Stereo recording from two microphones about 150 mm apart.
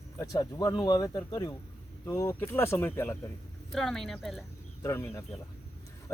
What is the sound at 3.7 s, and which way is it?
Speech, 5° left (ahead or behind).